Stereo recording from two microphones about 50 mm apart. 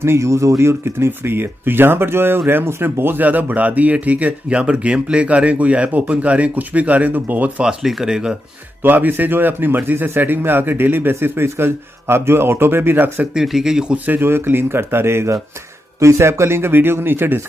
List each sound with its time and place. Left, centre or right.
0.0 s a man's voice: right
3.3 s speech: right
7.6 s speech: centre
8.8 s a man's voice: right
13.3 s speech: centre
13.9 s speech: right
14.2 s a man's voice: right
16.0 s speech: right